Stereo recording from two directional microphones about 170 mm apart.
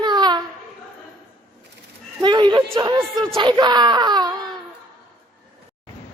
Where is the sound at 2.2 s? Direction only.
25° right (ahead or behind).